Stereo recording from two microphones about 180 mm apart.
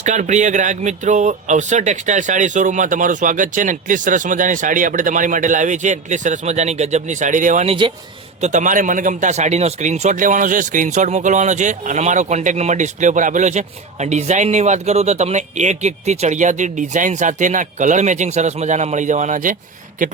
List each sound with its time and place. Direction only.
0.0 s speech: 40° right (ahead or behind)
8.4 s speech: 45° right (ahead or behind)